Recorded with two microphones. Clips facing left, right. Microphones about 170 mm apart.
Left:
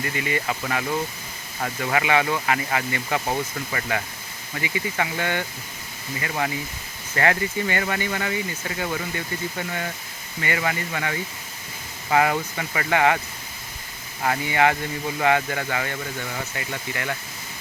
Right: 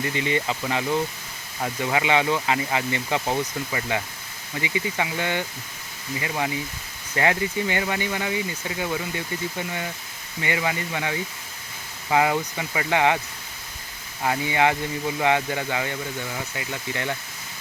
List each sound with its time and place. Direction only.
0.0 s speech: 20° right (ahead or behind)
14.3 s speech: 15° right (ahead or behind)
16.9 s speech: 20° right (ahead or behind)